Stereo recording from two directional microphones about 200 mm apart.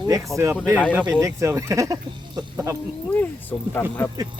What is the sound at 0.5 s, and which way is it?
Speech, 5° right (ahead or behind).